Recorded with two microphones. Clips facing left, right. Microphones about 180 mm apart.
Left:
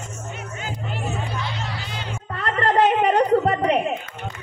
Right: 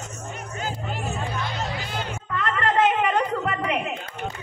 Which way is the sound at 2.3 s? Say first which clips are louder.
Left 3 dB; 35° left (ahead or behind).